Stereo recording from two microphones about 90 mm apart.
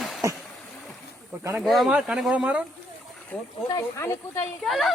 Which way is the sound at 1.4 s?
35° right (ahead or behind).